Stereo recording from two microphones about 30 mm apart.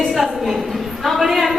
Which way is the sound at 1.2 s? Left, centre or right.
Centre.